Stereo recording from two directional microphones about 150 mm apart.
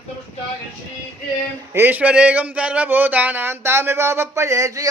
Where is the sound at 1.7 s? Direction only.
10° right (ahead or behind).